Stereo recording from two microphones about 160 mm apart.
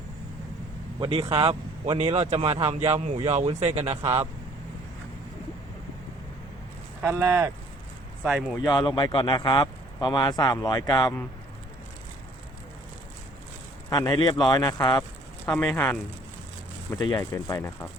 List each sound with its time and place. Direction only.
0.9 s speech: 30° right (ahead or behind)
7.0 s speech: 15° right (ahead or behind)
8.6 s speech: 25° left (ahead or behind)
13.9 s speech: 25° left (ahead or behind)
15.4 s speech: 15° left (ahead or behind)
16.9 s speech: 25° left (ahead or behind)